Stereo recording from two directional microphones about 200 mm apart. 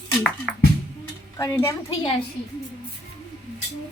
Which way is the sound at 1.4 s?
15° left (ahead or behind).